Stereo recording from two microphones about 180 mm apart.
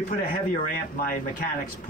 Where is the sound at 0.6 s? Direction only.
50° left (ahead or behind).